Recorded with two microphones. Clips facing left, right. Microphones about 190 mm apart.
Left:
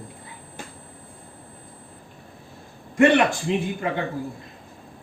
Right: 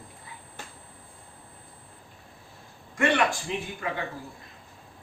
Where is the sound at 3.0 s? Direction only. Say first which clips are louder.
Left 7 dB; 25° left (ahead or behind).